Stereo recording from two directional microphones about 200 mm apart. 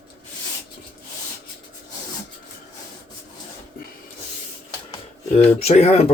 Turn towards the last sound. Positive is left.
turn(degrees=30)  # may be behind; listen again after turning